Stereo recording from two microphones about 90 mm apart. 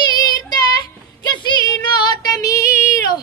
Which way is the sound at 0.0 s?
50° left (ahead or behind).